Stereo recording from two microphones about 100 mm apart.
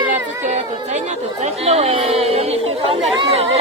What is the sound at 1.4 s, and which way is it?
Speech, 90° right.